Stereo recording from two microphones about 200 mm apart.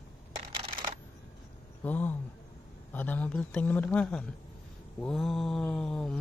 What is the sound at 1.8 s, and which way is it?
Speech, 10° left (ahead or behind).